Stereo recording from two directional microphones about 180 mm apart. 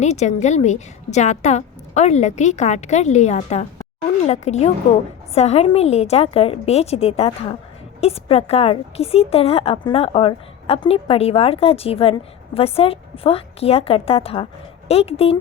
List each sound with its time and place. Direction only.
0.0 s speech: 40° left (ahead or behind)